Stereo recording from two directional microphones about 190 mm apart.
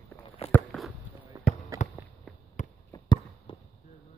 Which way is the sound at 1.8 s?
40° left (ahead or behind).